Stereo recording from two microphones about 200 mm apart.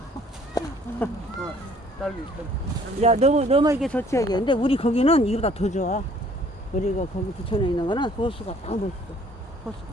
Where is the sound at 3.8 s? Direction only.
10° left (ahead or behind); by 6.0 s 35° left (ahead or behind).